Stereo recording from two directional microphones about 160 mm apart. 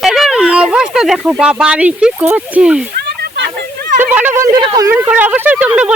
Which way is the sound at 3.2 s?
85° right.